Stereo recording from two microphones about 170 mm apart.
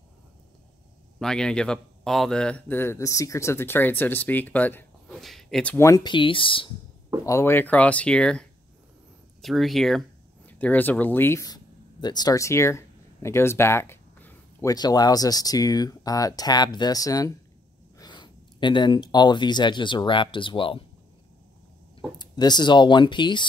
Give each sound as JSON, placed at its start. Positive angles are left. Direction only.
{"t": 1.2, "sound": "a man's voice", "side_deg": 5}
{"t": 5.9, "sound": "speech", "side_deg": 25}
{"t": 7.2, "sound": "a man's voice", "side_deg": 15}
{"t": 22.2, "sound": "speech", "side_deg": 25}